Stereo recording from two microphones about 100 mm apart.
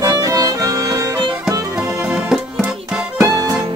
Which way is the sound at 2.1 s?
5° right (ahead or behind).